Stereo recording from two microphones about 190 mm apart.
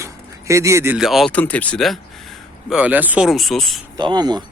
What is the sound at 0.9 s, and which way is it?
Speech, centre (ahead or behind).